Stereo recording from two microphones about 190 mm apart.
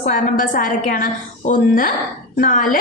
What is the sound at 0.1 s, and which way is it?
A woman's voice, 45° left (ahead or behind).